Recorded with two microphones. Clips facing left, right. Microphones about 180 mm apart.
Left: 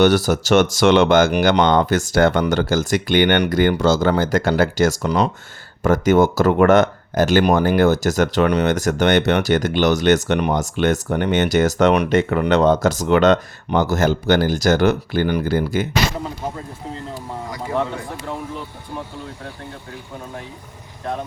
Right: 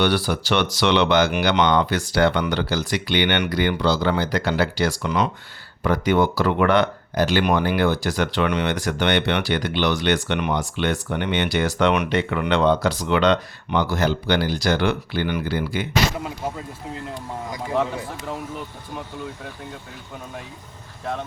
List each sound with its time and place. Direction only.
0.0 s speech: 45° left (ahead or behind)